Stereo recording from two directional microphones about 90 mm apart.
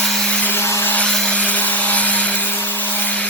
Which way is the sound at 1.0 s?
10° left (ahead or behind).